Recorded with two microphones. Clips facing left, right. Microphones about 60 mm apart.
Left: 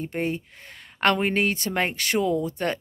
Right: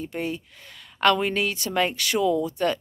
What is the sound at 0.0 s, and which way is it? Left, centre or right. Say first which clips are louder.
Speech: left 2 dB; left.